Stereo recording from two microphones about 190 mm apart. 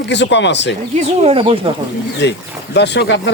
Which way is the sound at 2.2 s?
65° left (ahead or behind).